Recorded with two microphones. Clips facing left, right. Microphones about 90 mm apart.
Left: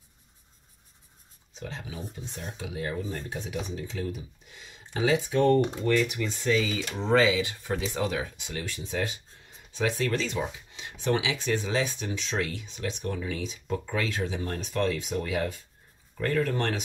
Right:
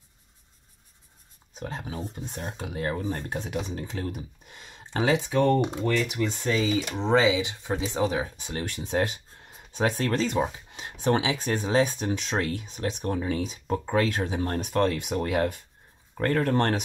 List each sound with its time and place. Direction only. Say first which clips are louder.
1.6 s speech: right 4 dB; 45° right (ahead or behind)
6.1 s speech: even; 40° right (ahead or behind)
6.6 s speech: right 4 dB; 25° right (ahead or behind)
8.4 s speech: right 3 dB; 40° right (ahead or behind)
8.6 s speech: right 5 dB; 60° right (ahead or behind)
9.7 s speech: right 2 dB; 45° right (ahead or behind)